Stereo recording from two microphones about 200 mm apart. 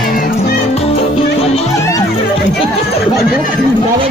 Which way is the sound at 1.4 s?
30° left (ahead or behind).